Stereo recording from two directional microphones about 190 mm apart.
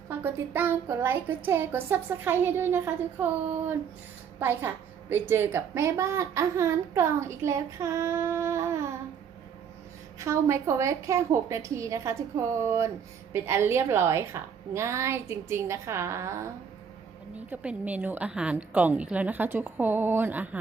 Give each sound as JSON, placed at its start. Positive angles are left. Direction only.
{"t": 0.1, "sound": "a woman's voice", "side_deg": -10}
{"t": 4.4, "sound": "a woman's voice", "side_deg": -10}
{"t": 10.2, "sound": "a woman's voice", "side_deg": -15}
{"t": 17.5, "sound": "a woman's voice", "side_deg": -5}